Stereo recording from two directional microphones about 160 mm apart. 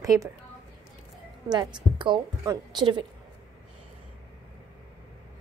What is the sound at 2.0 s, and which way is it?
A woman's voice, 25° right (ahead or behind).